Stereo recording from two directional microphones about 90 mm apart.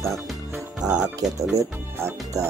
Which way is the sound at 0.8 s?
45° right (ahead or behind).